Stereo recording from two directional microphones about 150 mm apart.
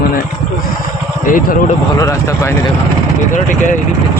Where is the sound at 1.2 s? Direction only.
65° left (ahead or behind).